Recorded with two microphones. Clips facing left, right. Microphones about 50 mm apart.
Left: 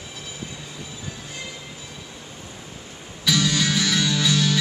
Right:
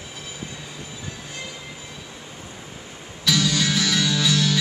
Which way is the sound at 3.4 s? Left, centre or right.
Centre.